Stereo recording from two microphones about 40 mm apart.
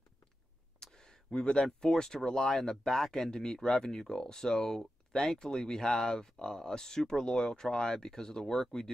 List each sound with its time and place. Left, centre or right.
0.9 s speech: centre